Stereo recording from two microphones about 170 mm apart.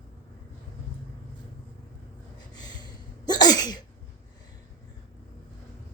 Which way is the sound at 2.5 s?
25° left (ahead or behind).